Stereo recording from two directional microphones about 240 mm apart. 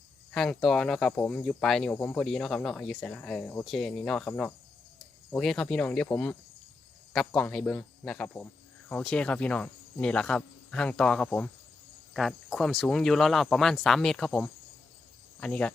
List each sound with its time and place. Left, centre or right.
0.3 s speech: centre